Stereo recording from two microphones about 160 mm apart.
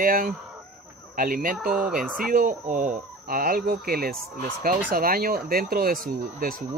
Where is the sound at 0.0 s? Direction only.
60° right (ahead or behind).